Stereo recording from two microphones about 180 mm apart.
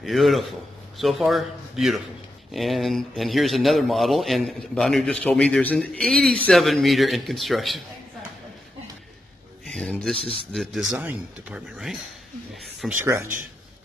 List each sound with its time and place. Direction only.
0.0 s a man's voice: centre (ahead or behind)
9.7 s speech: 5° left (ahead or behind)
10.1 s a man's voice: 30° left (ahead or behind)
10.5 s speech: centre (ahead or behind)
12.8 s speech: 15° right (ahead or behind)